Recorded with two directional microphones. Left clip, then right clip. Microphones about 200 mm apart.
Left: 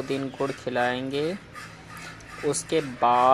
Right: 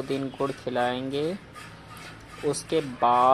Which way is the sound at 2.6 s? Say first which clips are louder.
Left 1 dB; centre (ahead or behind).